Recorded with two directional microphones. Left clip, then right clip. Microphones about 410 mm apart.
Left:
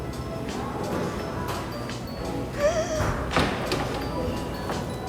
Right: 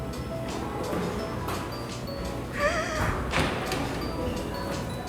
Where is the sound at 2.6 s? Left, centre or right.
Centre.